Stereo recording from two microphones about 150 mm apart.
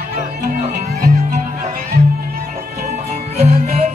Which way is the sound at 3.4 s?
45° right (ahead or behind).